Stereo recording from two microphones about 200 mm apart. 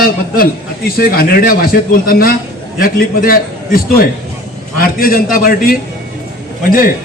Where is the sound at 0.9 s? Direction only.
50° left (ahead or behind).